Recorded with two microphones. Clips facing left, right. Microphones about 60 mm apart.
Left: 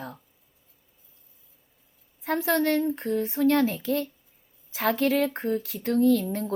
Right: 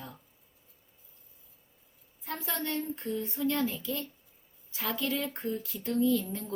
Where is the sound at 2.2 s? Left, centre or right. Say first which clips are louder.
Left 12 dB; left.